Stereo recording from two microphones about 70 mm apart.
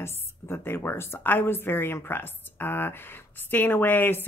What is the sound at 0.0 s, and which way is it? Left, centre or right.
A woman's voice, left.